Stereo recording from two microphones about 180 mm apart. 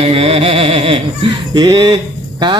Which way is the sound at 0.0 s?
35° right (ahead or behind).